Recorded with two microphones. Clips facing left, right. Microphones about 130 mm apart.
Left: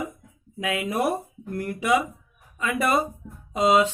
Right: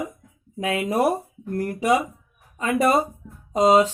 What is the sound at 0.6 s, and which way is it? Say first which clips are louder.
Speech: right 4 dB; 35° right (ahead or behind).